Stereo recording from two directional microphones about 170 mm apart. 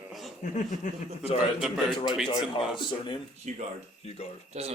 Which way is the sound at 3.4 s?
45° right (ahead or behind).